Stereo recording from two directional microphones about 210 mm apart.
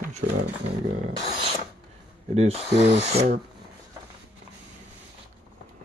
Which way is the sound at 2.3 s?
30° right (ahead or behind).